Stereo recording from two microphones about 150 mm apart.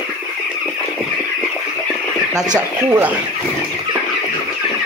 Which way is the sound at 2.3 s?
25° right (ahead or behind).